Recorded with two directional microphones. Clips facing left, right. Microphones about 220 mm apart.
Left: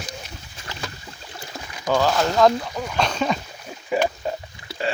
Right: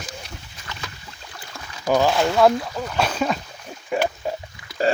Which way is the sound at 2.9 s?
5° right (ahead or behind).